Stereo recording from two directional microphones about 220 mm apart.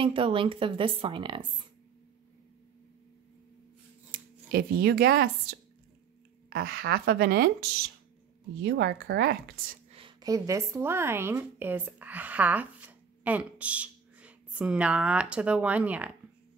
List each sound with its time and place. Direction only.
0.0 s a woman's voice: 25° right (ahead or behind)
4.1 s speech: 40° right (ahead or behind)
6.5 s a woman's voice: 45° right (ahead or behind)
9.8 s a woman's voice: 25° right (ahead or behind); by 16.1 s 5° right (ahead or behind)